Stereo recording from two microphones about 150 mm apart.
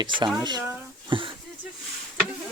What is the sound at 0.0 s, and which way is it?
Speech, 30° right (ahead or behind).